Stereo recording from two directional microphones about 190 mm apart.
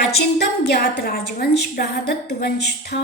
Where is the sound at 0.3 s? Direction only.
55° left (ahead or behind).